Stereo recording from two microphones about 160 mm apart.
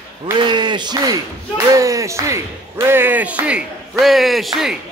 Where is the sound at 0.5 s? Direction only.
30° right (ahead or behind); by 4.7 s centre (ahead or behind).